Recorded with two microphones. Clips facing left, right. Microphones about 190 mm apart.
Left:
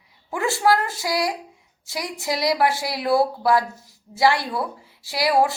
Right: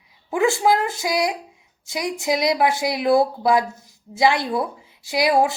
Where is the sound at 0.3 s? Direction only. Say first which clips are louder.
Right 2 dB; 15° right (ahead or behind).